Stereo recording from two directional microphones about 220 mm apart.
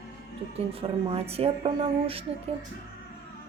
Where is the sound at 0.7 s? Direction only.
25° right (ahead or behind).